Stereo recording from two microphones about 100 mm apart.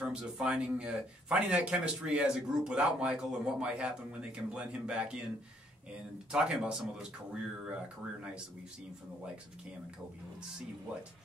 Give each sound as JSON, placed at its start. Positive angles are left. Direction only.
{"t": 0.1, "sound": "a man's voice", "side_deg": -10}
{"t": 6.3, "sound": "a man's voice", "side_deg": -5}